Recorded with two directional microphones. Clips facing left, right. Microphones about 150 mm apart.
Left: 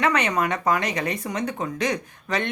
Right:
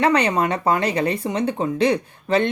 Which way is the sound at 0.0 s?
30° right (ahead or behind).